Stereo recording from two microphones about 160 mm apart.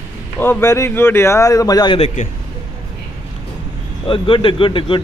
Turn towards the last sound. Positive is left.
turn(degrees=30)  # may be behind; listen again after turning